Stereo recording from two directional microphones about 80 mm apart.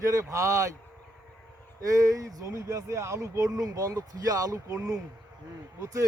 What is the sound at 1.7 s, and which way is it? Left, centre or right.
Speech, right.